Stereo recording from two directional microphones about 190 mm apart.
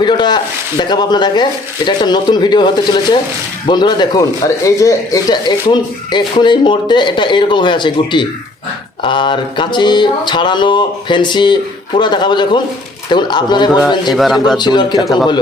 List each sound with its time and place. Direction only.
0.0 s speech: 25° left (ahead or behind)
14.1 s a man's voice: centre (ahead or behind)
14.6 s speech: 25° left (ahead or behind)